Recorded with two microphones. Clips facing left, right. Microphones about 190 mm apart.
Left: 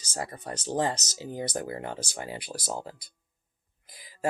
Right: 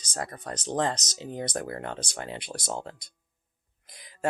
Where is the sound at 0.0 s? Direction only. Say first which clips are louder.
Even; 5° left (ahead or behind).